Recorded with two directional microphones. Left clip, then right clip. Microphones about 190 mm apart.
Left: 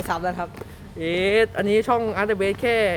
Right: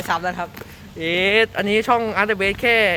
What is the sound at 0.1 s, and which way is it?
Speech, 10° left (ahead or behind).